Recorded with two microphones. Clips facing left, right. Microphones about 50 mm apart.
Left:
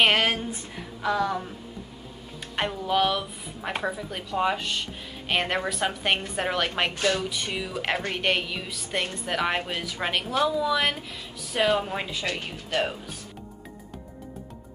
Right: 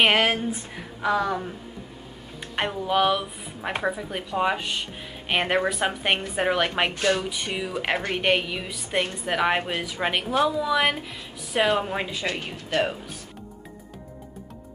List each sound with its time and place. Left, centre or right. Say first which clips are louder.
0.0 s a woman's voice: right 2 dB; centre
2.5 s a woman's voice: right 1 dB; centre